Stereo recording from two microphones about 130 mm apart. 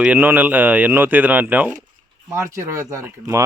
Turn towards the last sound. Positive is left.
turn(degrees=-20)  # may be behind; listen again after turning